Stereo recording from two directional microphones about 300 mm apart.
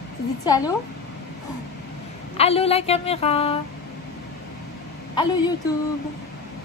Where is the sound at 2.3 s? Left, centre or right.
Centre.